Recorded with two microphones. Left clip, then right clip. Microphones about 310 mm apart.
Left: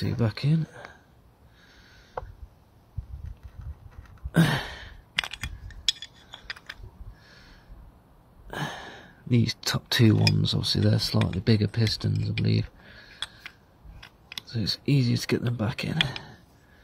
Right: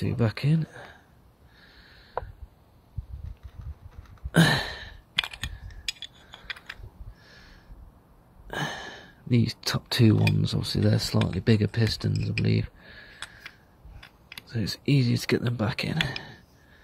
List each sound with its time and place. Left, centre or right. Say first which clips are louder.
0.0 s speech: right 1 dB; centre
4.3 s a sound: right 3 dB; centre
9.0 s speech: left 1 dB; centre
13.2 s a sound: left 5 dB; centre
14.4 s speech: left 3 dB; centre
14.9 s speech: right 3 dB; centre